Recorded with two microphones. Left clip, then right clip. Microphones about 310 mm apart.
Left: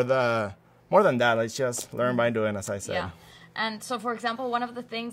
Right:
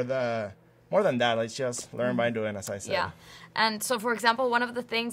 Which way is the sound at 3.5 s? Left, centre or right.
Right.